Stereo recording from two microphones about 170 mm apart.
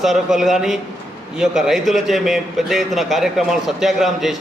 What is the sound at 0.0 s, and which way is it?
A man's voice, centre (ahead or behind).